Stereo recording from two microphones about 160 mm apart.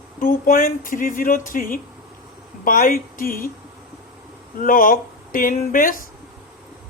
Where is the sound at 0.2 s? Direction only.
60° left (ahead or behind).